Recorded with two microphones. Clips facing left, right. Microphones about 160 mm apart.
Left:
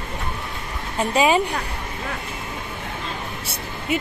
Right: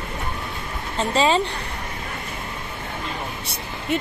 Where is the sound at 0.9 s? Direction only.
10° left (ahead or behind).